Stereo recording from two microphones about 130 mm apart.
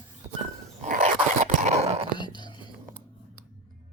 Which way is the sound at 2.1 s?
35° left (ahead or behind).